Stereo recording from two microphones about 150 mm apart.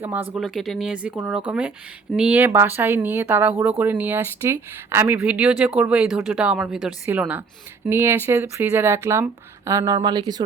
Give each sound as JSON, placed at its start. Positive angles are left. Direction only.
{"t": 0.0, "sound": "speech", "side_deg": -15}
{"t": 0.3, "sound": "speech", "side_deg": 0}
{"t": 2.4, "sound": "speech", "side_deg": -15}